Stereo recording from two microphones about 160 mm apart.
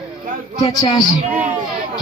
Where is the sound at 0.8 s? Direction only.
25° left (ahead or behind).